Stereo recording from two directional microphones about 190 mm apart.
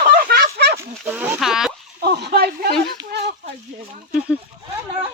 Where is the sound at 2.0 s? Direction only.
60° right (ahead or behind).